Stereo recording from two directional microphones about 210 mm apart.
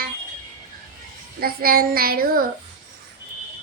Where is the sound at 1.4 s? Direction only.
45° right (ahead or behind).